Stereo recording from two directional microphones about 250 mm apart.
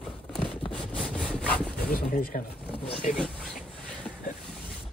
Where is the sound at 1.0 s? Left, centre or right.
Centre.